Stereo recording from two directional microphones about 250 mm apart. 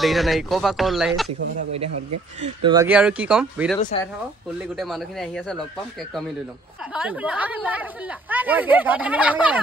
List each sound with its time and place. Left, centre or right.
0.0 s speech: centre
1.7 s speech: right
2.4 s speech: centre
2.9 s speech: centre
3.9 s speech: left
4.6 s speech: centre
6.9 s speech: centre